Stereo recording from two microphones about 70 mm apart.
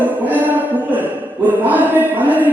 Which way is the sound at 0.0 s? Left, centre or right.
Right.